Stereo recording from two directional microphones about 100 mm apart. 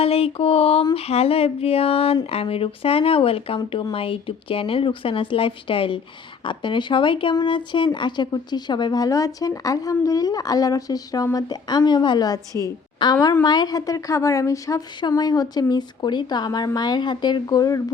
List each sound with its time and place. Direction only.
0.0 s speech: 75° left (ahead or behind)
0.9 s a sound: 85° left
2.3 s a woman's voice: 75° left (ahead or behind); by 12.7 s 35° left (ahead or behind)
13.0 s a woman's voice: 55° left (ahead or behind); by 14.8 s 35° left (ahead or behind)
15.0 s speech: 45° left (ahead or behind)